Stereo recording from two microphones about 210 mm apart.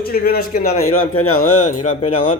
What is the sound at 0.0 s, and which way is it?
Speech, 45° left (ahead or behind).